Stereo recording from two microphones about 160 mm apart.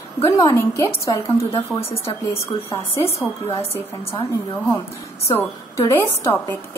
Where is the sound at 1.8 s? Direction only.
40° left (ahead or behind).